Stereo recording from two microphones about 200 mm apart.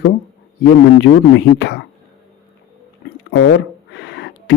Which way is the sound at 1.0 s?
60° left (ahead or behind).